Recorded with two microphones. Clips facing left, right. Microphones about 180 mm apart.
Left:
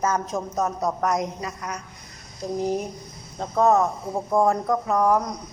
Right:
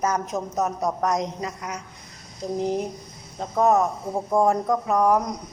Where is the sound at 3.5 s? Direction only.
15° right (ahead or behind).